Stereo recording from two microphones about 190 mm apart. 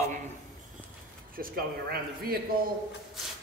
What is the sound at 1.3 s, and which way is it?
Speech, 50° right (ahead or behind).